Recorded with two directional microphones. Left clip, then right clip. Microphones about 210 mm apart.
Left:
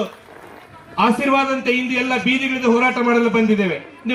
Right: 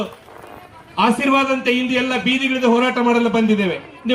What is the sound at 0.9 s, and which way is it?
A man's voice, 20° right (ahead or behind).